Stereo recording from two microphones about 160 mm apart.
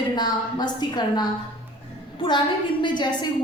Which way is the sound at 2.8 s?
30° left (ahead or behind).